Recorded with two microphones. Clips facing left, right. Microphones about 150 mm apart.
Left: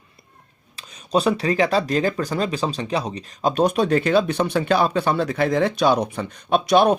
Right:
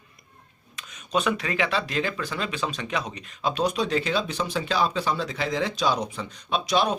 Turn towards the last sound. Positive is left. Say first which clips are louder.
# left 8 dB
turn(degrees=55)  # may be behind; listen again after turning